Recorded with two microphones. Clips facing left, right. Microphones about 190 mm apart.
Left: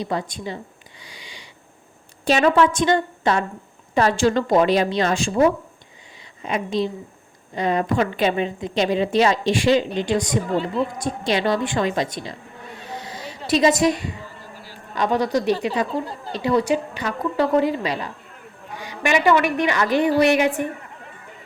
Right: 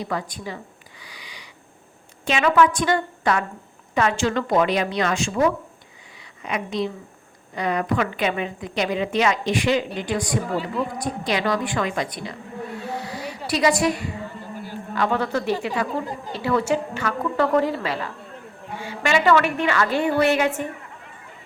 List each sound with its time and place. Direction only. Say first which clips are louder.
0.0 s a woman's voice: left 2 dB; 25° left (ahead or behind)
1.0 s a sound: left 1 dB; 25° left (ahead or behind)
2.2 s a woman's voice: left 2 dB; 35° left (ahead or behind); by 20.5 s 15° left (ahead or behind)